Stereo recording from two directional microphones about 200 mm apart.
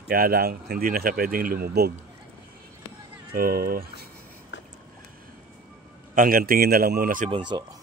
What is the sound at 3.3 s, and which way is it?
Speech, 45° right (ahead or behind).